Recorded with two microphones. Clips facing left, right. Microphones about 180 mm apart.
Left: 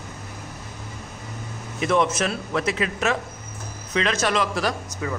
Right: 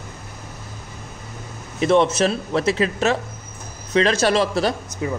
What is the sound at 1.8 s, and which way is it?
Speech, 30° right (ahead or behind).